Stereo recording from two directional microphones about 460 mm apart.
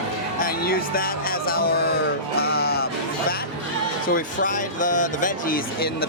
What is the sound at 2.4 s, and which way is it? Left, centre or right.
Music, centre.